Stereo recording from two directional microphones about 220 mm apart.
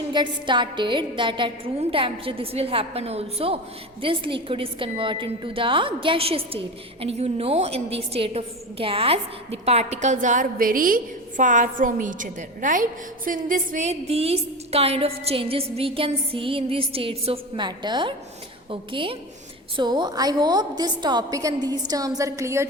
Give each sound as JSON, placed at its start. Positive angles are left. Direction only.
{"t": 0.1, "sound": "a woman's voice", "side_deg": -20}